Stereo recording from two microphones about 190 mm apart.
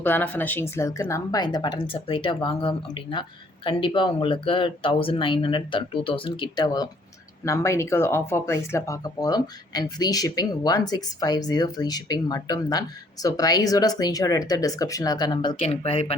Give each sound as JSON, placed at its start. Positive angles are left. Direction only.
{"t": 0.0, "sound": "speech", "side_deg": 10}